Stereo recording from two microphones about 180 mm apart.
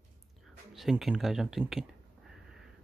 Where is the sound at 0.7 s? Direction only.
Centre (ahead or behind).